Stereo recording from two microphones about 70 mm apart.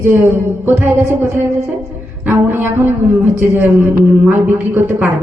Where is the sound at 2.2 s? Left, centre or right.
Right.